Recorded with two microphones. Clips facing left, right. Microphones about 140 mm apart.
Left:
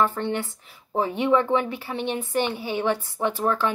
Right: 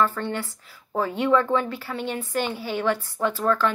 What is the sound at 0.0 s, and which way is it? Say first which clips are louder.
A woman's voice: left 1 dB; 20° left (ahead or behind).